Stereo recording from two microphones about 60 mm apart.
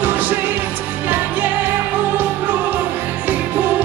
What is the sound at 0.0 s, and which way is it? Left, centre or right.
Music, right.